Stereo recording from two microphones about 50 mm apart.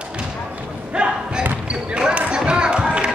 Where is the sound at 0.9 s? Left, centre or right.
Centre.